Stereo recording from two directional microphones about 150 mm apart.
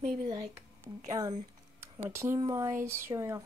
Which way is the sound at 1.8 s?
15° right (ahead or behind).